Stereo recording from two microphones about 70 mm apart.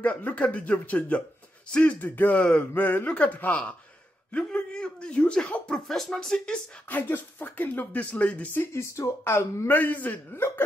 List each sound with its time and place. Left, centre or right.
0.0 s speech: left
5.9 s speech: centre
6.9 s speech: left
8.7 s speech: left
9.7 s speech: left